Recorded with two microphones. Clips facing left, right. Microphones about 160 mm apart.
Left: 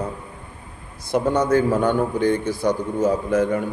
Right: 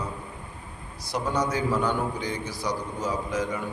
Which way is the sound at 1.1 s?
55° left (ahead or behind).